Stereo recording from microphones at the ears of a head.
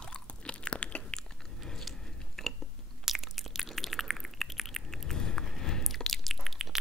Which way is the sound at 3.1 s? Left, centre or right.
Centre.